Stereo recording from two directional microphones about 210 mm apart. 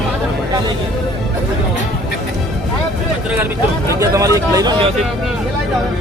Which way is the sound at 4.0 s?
15° right (ahead or behind).